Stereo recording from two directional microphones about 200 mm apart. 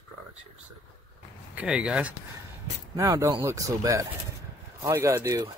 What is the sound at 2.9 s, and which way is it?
Speech, 15° right (ahead or behind).